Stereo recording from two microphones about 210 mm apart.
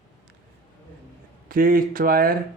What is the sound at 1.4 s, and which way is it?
Speech, 45° right (ahead or behind).